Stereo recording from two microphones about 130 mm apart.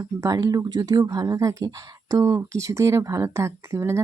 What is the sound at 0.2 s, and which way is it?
Speech, 25° right (ahead or behind).